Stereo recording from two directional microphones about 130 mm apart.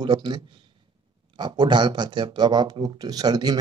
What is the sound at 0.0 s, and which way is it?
A man's voice, 35° right (ahead or behind).